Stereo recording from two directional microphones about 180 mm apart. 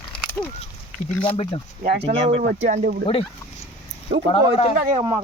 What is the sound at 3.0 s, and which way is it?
Speech, 30° left (ahead or behind).